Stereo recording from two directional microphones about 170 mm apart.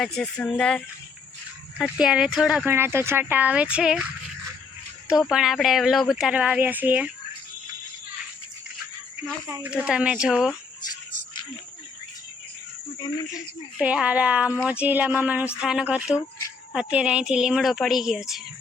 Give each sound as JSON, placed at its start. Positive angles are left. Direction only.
{"t": 0.0, "sound": "speech", "side_deg": 5}
{"t": 1.8, "sound": "speech", "side_deg": -5}
{"t": 2.7, "sound": "speech", "side_deg": -15}
{"t": 5.3, "sound": "speech", "side_deg": 0}
{"t": 9.6, "sound": "speech", "side_deg": -5}
{"t": 13.0, "sound": "speech", "side_deg": 25}
{"t": 13.3, "sound": "speech", "side_deg": -5}